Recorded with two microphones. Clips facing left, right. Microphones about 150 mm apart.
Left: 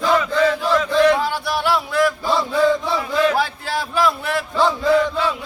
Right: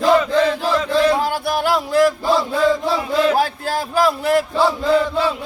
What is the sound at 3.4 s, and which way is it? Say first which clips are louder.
Speech: right 3 dB; 45° right (ahead or behind).